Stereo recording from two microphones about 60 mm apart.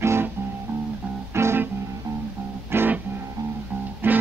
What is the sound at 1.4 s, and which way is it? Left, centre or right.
Music, right.